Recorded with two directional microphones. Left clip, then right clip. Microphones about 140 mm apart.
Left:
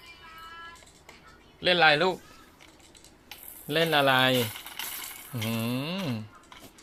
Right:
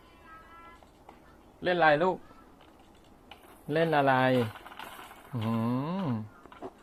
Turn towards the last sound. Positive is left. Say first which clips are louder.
# left 1 dB
turn(degrees=-10)  # may be behind; listen again after turning